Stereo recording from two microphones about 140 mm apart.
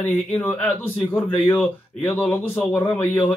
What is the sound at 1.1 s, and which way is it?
Speech, 15° left (ahead or behind).